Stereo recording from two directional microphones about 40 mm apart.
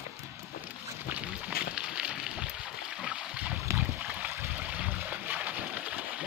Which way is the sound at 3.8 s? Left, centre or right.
Right.